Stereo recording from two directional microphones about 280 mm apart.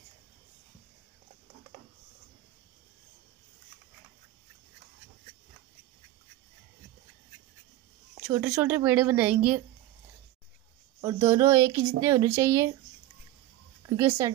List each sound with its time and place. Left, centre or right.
8.3 s speech: centre
11.0 s speech: centre
13.8 s speech: centre